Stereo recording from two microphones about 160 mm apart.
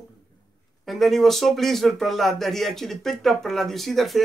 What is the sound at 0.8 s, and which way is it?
Speech, centre (ahead or behind).